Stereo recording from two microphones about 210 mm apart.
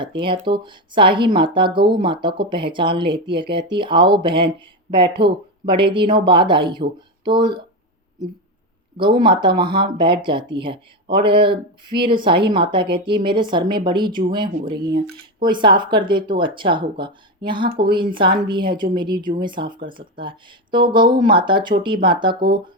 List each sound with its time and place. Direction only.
0.0 s speech: 25° right (ahead or behind)
9.0 s speech: 20° right (ahead or behind)
14.8 s speech: 50° right (ahead or behind)
15.4 s speech: 20° right (ahead or behind)